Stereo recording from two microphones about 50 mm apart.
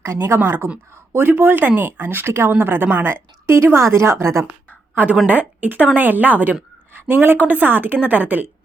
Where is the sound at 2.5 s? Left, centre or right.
Right.